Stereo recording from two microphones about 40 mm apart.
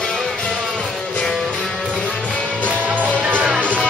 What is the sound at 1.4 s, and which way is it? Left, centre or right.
Music, centre.